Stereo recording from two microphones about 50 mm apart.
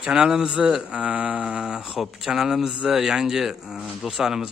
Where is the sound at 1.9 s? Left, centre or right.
Centre.